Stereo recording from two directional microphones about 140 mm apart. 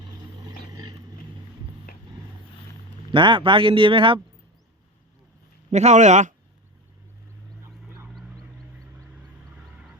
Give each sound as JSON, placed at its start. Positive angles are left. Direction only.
{"t": 0.0, "sound": "vehicle", "side_deg": -30}
{"t": 1.9, "sound": "a sound", "side_deg": 90}
{"t": 3.1, "sound": "speech", "side_deg": -35}
{"t": 5.7, "sound": "a man's voice", "side_deg": -55}